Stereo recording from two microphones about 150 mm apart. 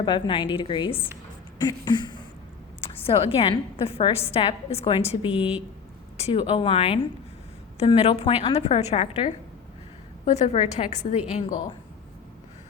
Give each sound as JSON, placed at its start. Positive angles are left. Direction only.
{"t": 0.0, "sound": "a woman's voice", "side_deg": 30}
{"t": 3.2, "sound": "a woman's voice", "side_deg": 35}